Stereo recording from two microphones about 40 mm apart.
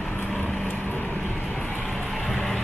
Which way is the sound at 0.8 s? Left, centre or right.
Left.